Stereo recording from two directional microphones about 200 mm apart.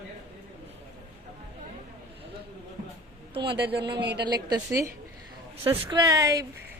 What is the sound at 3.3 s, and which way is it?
A woman's voice, 25° right (ahead or behind).